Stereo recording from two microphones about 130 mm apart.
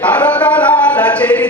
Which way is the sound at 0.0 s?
10° left (ahead or behind).